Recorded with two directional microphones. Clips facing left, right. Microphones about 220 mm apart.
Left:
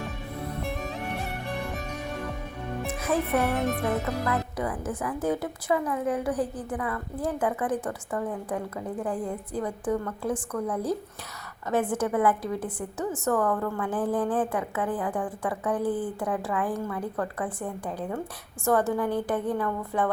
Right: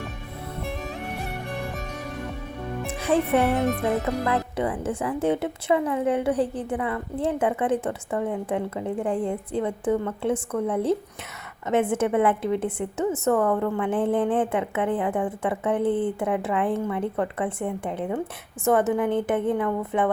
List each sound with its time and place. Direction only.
2.8 s a woman's voice: 30° right (ahead or behind)